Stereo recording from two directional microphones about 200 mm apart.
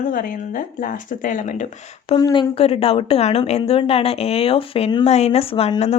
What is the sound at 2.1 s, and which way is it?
A woman's voice, 20° left (ahead or behind).